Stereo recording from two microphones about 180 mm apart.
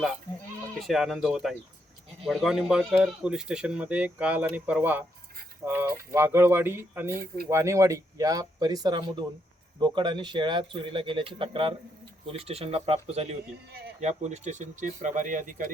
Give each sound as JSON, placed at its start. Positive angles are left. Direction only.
{"t": 0.8, "sound": "speech", "side_deg": 0}